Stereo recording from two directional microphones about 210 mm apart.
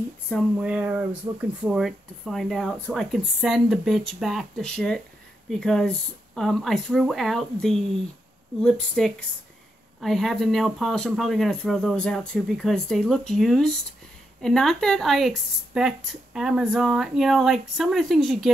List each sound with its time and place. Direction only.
0.3 s speech: centre (ahead or behind)